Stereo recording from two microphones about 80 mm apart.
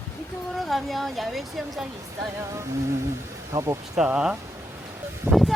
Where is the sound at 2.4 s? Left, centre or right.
Right.